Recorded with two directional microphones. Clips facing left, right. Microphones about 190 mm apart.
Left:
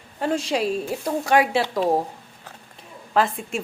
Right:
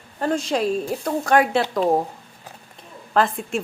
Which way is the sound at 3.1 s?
Centre (ahead or behind).